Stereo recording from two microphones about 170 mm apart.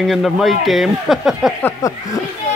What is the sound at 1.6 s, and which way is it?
Speech, 20° left (ahead or behind).